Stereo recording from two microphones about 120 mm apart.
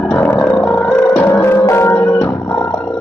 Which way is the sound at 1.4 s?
25° left (ahead or behind).